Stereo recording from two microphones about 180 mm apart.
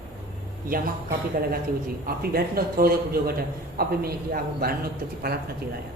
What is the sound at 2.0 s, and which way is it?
A man's voice, 55° right (ahead or behind).